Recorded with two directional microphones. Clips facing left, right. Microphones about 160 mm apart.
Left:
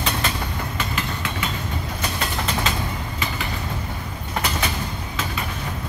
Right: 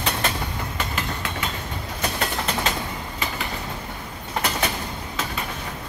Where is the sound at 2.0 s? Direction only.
50° right (ahead or behind).